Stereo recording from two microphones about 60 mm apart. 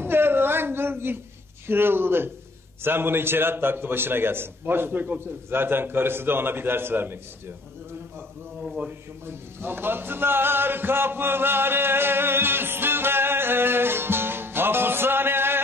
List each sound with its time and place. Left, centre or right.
0.0 s a sound: right
1.7 s a man's voice: right
9.2 s music: right